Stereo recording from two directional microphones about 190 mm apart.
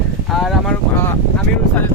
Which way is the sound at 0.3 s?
Centre (ahead or behind).